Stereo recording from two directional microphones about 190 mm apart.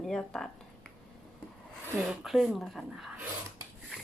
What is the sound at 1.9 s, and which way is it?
Speech, 5° right (ahead or behind).